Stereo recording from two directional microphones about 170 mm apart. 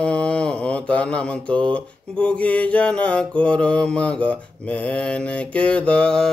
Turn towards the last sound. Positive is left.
turn(degrees=5)  # may be behind; listen again after turning